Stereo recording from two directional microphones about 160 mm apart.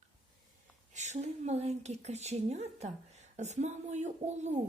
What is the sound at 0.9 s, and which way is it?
A woman's voice, 45° right (ahead or behind).